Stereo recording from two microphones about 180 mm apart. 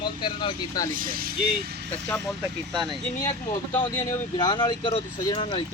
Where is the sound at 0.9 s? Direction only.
50° right (ahead or behind).